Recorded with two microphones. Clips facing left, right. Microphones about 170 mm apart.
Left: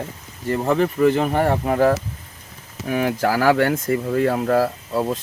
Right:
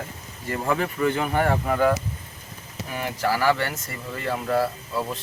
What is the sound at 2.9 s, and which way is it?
Speech, 60° left (ahead or behind).